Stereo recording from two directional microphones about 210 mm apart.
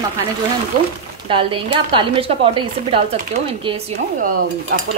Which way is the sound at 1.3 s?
25° right (ahead or behind).